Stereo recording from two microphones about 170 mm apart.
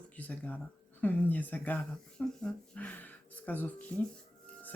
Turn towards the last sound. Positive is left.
turn(degrees=10)  # may be behind; listen again after turning